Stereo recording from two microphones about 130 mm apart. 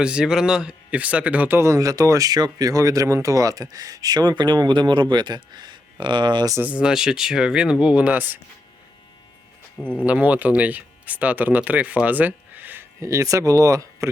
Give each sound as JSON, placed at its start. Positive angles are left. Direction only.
{"t": 0.0, "sound": "speech", "side_deg": -5}
{"t": 6.6, "sound": "speech", "side_deg": -10}
{"t": 9.8, "sound": "speech", "side_deg": 10}
{"t": 10.1, "sound": "speech", "side_deg": -10}